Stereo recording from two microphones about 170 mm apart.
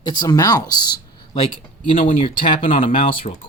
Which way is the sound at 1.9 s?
35° left (ahead or behind).